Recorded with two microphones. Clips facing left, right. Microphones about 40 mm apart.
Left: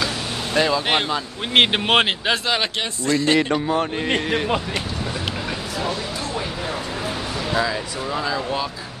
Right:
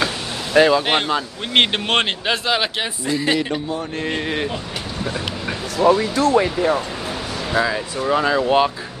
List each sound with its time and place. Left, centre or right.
0.6 s speech: centre
0.8 s speech: centre
5.8 s speech: right
7.5 s speech: centre
8.1 s speech: right
8.5 s speech: right